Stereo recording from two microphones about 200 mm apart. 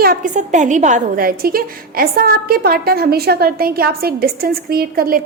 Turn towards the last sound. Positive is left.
turn(degrees=-45)  # may be behind; listen again after turning